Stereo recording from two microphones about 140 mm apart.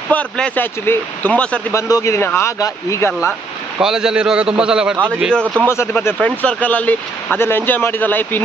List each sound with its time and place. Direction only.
0.1 s speech: 10° left (ahead or behind)
1.7 s speech: 25° left (ahead or behind)
3.8 s a man's voice: 5° right (ahead or behind)
5.9 s speech: 10° left (ahead or behind)